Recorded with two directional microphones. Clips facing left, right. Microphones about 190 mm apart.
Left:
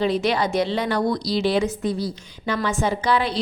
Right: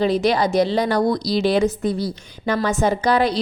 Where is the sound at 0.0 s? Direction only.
40° right (ahead or behind).